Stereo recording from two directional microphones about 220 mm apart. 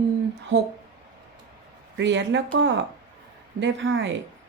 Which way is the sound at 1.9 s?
55° right (ahead or behind).